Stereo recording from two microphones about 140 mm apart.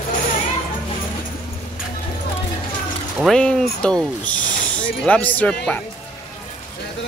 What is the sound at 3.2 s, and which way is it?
Speech, 5° left (ahead or behind).